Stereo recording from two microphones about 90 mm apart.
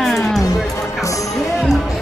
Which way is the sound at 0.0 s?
Centre (ahead or behind).